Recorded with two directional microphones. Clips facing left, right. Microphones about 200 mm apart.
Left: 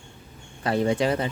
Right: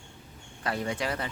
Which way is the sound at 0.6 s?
30° left (ahead or behind).